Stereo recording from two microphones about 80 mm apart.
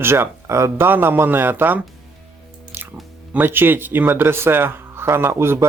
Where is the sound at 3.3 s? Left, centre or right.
Right.